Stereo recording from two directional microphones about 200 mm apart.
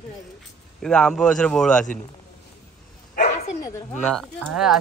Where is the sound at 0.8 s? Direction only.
5° left (ahead or behind).